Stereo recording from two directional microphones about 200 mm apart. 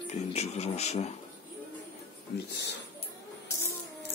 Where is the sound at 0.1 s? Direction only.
30° left (ahead or behind).